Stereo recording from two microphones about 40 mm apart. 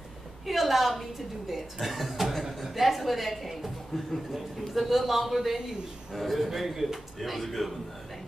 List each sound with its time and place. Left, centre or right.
0.5 s a woman's voice: centre